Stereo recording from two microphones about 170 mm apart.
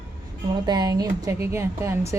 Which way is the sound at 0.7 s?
20° right (ahead or behind).